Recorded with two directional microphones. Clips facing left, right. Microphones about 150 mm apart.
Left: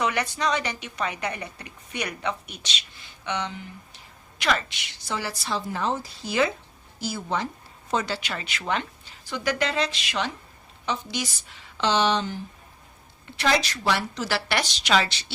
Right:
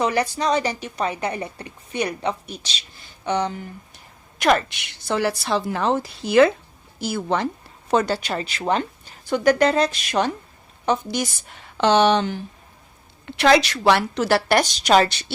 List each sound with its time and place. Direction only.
0.0 s a woman's voice: 35° right (ahead or behind); by 7.4 s 65° right (ahead or behind)
7.9 s a woman's voice: 55° right (ahead or behind)